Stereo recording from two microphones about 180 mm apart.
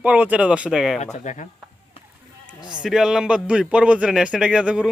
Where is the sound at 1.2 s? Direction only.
40° left (ahead or behind).